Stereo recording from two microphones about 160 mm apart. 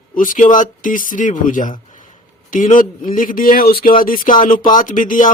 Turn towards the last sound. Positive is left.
turn(degrees=55)  # may be behind; listen again after turning